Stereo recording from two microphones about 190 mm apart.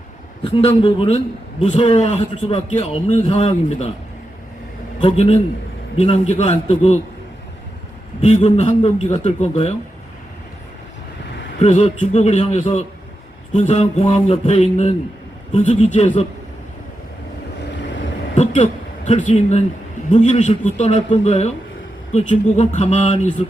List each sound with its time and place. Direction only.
0.4 s a man's voice: 30° left (ahead or behind)
4.9 s a man's voice: 35° left (ahead or behind)
8.2 s a man's voice: 35° left (ahead or behind)
11.6 s a man's voice: 35° left (ahead or behind)
18.3 s a man's voice: 35° left (ahead or behind)